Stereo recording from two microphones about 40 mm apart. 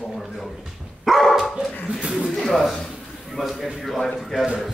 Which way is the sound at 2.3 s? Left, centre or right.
Centre.